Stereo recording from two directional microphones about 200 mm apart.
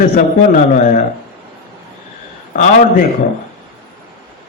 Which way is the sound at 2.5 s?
40° left (ahead or behind).